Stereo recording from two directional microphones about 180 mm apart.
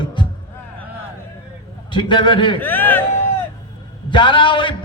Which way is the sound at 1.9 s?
25° left (ahead or behind).